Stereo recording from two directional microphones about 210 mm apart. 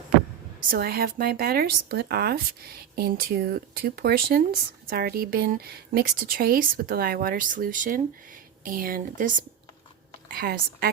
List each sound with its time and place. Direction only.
0.7 s speech: 45° right (ahead or behind)